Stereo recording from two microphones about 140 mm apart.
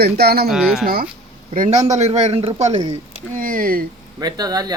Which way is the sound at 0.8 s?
90° right.